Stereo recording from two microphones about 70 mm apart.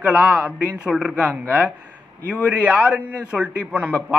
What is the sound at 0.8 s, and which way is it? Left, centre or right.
A man's voice, centre.